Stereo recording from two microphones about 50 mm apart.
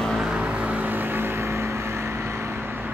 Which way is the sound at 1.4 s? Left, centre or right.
Right.